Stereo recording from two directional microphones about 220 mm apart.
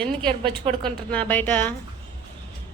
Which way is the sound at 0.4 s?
25° right (ahead or behind).